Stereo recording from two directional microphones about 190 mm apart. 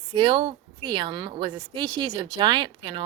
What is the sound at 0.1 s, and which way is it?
A woman's voice, 25° right (ahead or behind).